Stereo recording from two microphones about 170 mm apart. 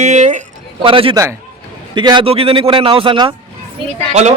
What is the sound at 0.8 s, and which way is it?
A man's voice, 30° right (ahead or behind).